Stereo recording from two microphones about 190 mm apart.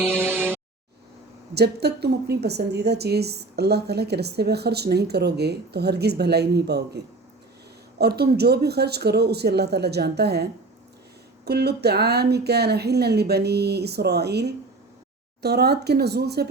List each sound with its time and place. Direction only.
0.0 s music: 10° right (ahead or behind)
1.5 s a woman's voice: 60° right (ahead or behind)